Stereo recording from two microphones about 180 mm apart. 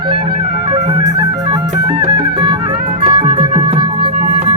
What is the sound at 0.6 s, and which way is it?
Music, 35° right (ahead or behind).